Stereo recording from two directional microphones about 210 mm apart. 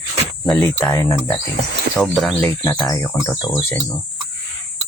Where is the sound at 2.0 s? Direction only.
Centre (ahead or behind).